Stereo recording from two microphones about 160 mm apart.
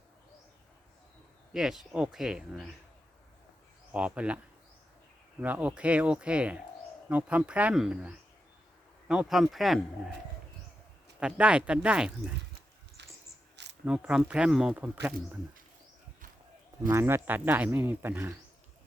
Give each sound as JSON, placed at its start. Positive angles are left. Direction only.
{"t": 1.5, "sound": "speech", "side_deg": 0}
{"t": 3.9, "sound": "speech", "side_deg": -5}
{"t": 5.4, "sound": "speech", "side_deg": -10}
{"t": 11.2, "sound": "speech", "side_deg": -5}
{"t": 13.0, "sound": "dog", "side_deg": -90}
{"t": 13.8, "sound": "speech", "side_deg": -5}
{"t": 16.9, "sound": "speech", "side_deg": -15}